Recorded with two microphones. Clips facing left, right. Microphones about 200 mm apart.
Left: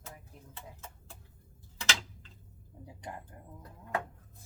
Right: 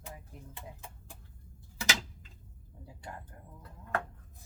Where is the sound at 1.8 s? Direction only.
10° right (ahead or behind).